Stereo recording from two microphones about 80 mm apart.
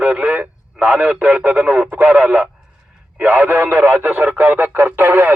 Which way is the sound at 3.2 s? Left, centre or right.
Right.